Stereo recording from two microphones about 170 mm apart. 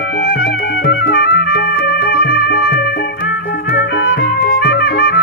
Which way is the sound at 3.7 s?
80° left.